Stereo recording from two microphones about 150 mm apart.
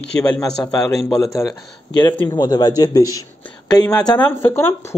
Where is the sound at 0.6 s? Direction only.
25° left (ahead or behind).